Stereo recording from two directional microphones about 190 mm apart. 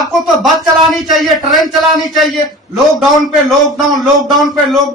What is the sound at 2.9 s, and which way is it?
A man's voice, centre (ahead or behind).